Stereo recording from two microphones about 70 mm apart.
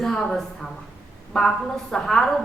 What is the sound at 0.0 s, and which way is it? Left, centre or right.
A woman's voice, centre.